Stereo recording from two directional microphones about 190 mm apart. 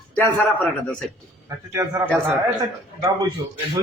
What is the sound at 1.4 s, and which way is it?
A man's voice, 15° right (ahead or behind).